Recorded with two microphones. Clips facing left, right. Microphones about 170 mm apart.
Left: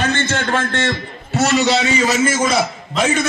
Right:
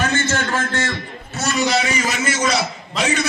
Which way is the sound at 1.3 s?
70° left (ahead or behind).